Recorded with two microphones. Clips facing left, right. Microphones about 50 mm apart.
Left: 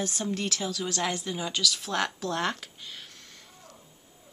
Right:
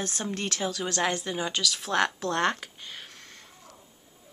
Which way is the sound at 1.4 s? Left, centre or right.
Centre.